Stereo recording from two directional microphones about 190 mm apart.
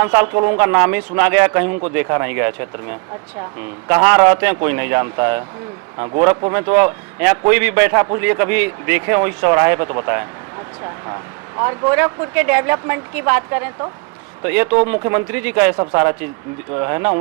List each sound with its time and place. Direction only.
0.0 s a man's voice: 15° right (ahead or behind)
15.7 s a man's voice: 20° right (ahead or behind)